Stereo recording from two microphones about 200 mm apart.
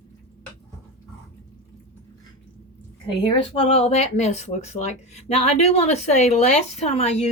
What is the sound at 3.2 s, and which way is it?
Speech, 25° left (ahead or behind).